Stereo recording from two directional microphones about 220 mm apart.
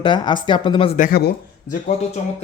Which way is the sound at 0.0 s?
20° left (ahead or behind).